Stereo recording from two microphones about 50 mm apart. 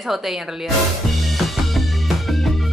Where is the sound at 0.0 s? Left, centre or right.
Centre.